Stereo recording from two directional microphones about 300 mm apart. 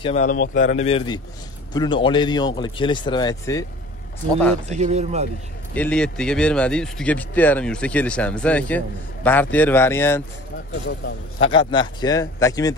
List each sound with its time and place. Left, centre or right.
0.0 s speech: left
4.6 s speech: right
5.8 s speech: centre
11.3 s speech: centre